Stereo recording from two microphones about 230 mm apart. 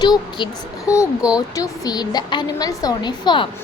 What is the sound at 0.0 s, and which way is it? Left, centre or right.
Speech, centre.